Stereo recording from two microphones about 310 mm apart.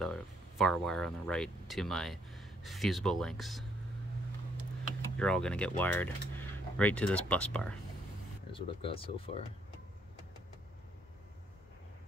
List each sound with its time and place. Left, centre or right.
0.0 s speech: centre
5.1 s speech: centre
8.5 s speech: centre